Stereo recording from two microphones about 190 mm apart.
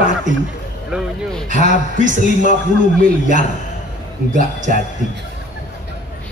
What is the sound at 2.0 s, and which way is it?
Speech, 45° right (ahead or behind).